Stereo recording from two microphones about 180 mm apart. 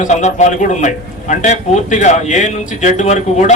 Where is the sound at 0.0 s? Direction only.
40° left (ahead or behind).